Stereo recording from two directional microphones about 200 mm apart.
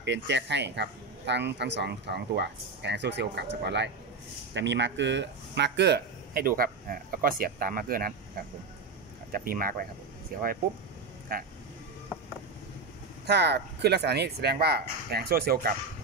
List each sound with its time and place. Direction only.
0.0 s speech: 60° right (ahead or behind)
11.3 s speech: 45° right (ahead or behind)
13.3 s speech: 55° right (ahead or behind)